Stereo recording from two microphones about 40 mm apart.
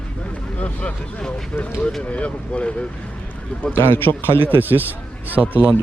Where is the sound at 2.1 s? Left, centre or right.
Left.